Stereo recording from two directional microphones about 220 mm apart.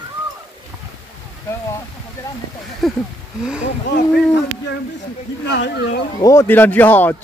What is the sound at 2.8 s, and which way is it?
Speech, centre (ahead or behind).